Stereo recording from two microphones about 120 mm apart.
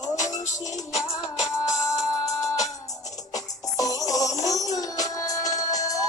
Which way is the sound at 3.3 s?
30° left (ahead or behind).